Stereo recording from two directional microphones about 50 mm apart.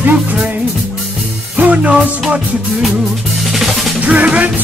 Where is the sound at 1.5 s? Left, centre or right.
Right.